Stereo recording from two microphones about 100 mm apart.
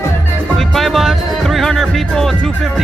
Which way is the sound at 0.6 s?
Centre (ahead or behind).